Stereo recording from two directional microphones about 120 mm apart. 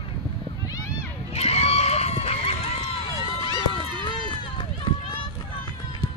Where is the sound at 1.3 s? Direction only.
60° left (ahead or behind).